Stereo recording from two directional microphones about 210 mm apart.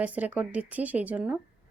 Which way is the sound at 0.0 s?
5° right (ahead or behind).